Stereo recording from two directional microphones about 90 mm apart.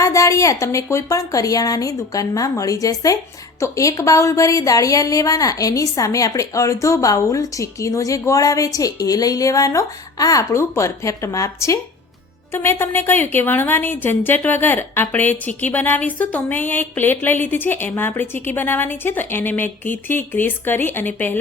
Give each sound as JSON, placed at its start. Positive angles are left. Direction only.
{"t": 0.0, "sound": "a woman's voice", "side_deg": 35}